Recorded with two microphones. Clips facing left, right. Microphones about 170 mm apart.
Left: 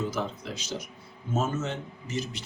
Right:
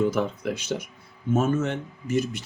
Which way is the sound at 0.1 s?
55° right (ahead or behind).